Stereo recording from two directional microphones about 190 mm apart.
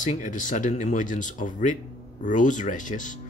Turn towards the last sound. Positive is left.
turn(degrees=40)  # may be behind; listen again after turning